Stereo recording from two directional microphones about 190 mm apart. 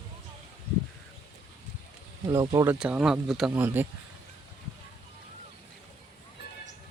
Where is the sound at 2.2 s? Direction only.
20° right (ahead or behind).